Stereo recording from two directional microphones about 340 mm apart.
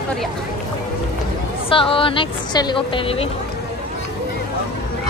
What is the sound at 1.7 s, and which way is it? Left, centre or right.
A woman's voice, centre.